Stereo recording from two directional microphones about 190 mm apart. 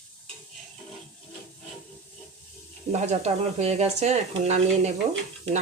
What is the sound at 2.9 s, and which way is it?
Speech, 35° right (ahead or behind).